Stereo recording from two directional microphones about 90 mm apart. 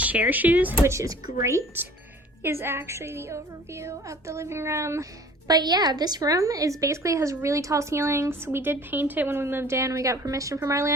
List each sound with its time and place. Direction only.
0.0 s speech: 20° right (ahead or behind)
0.9 s a woman's voice: 40° right (ahead or behind)
5.5 s a woman's voice: 50° right (ahead or behind); by 10.9 s 35° right (ahead or behind)